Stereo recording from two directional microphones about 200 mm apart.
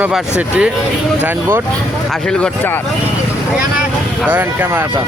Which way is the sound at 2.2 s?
5° left (ahead or behind).